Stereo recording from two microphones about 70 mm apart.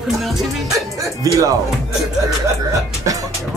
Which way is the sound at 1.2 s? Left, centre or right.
Right.